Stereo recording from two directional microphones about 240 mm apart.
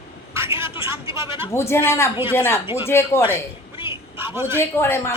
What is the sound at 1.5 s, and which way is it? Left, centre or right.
Speech, centre.